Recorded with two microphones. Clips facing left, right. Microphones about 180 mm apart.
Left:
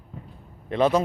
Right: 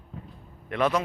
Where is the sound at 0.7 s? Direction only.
30° left (ahead or behind).